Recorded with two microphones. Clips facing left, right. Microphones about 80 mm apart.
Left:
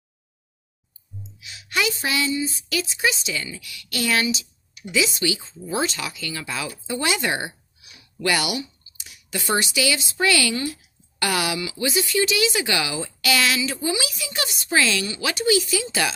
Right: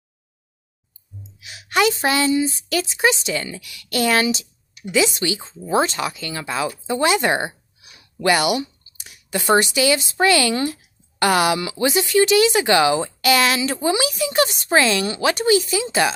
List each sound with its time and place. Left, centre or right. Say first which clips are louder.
1.4 s a woman's voice: right 7 dB; right